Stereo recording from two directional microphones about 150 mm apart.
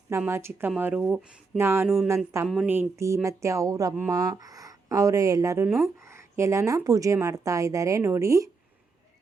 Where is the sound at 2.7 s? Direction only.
15° right (ahead or behind).